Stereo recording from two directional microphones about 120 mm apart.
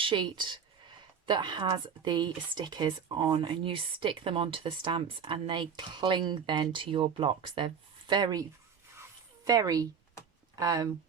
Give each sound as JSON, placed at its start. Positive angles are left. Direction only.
{"t": 0.0, "sound": "speech", "side_deg": -45}
{"t": 9.0, "sound": "a sound", "side_deg": -30}
{"t": 10.5, "sound": "speech", "side_deg": -30}